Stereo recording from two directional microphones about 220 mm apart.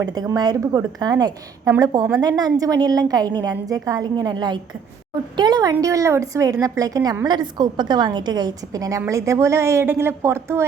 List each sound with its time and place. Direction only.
0.0 s a woman's voice: 15° right (ahead or behind)